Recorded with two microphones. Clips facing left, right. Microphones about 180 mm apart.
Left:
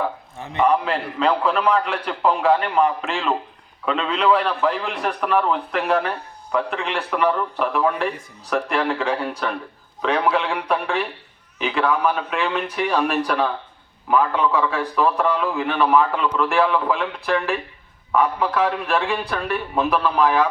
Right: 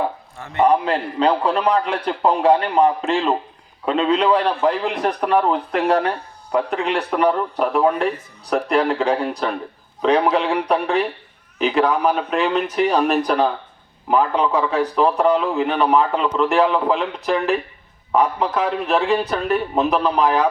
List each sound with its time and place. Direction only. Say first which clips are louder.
0.5 s a man's voice: right 3 dB; 35° right (ahead or behind)